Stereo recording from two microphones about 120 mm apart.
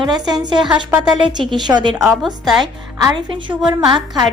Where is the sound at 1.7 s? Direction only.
35° right (ahead or behind).